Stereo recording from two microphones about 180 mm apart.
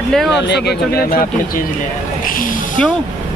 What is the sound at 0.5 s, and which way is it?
Speech, 65° left (ahead or behind).